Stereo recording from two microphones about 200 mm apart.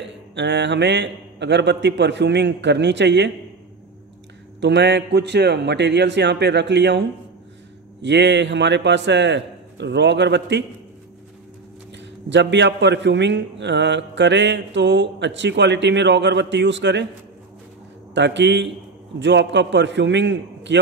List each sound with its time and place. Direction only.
0.3 s speech: 60° right (ahead or behind)
4.6 s speech: 60° right (ahead or behind)
12.3 s speech: 60° right (ahead or behind)
18.1 s speech: 60° right (ahead or behind)